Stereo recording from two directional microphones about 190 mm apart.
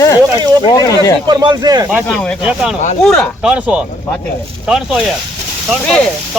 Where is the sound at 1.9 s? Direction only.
5° left (ahead or behind).